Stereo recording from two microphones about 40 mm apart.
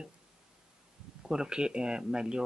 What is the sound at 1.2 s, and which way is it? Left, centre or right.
Speech, centre.